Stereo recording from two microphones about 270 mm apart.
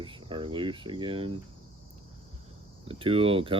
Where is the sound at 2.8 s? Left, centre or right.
Centre.